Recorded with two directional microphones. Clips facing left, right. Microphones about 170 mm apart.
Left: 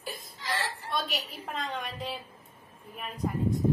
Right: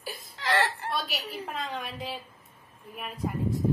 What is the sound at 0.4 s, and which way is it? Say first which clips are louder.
Whimper: right 8 dB; 70° right (ahead or behind).